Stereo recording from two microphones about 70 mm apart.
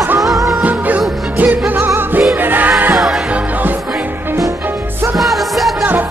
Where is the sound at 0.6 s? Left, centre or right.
Right.